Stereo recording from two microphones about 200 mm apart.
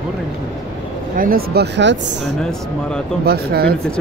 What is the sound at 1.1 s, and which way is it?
Speech, 45° right (ahead or behind).